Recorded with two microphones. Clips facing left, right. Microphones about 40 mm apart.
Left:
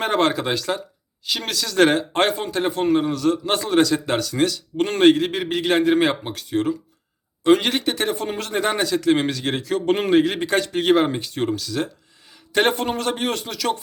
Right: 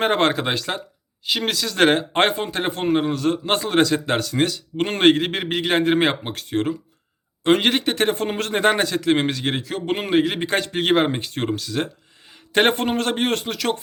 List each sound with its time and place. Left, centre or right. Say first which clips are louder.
0.0 s speech: right 1 dB; right
9.0 s a man's voice: left 1 dB; right
10.4 s speech: left 2 dB; right